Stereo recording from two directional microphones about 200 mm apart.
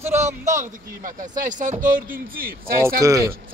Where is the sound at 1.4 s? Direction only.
40° right (ahead or behind).